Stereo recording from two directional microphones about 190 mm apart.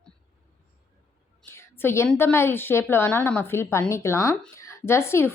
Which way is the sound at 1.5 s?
15° left (ahead or behind).